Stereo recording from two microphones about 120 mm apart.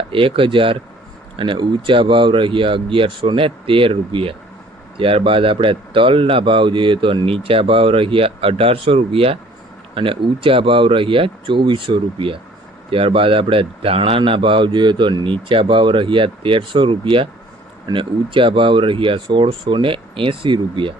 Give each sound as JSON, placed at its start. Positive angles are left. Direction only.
{"t": 0.1, "sound": "speech", "side_deg": -50}